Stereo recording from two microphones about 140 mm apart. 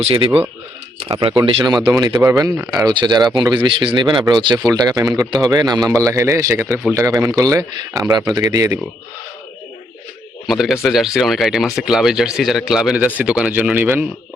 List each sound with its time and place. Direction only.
0.0 s speech: 35° right (ahead or behind)
10.4 s speech: centre (ahead or behind)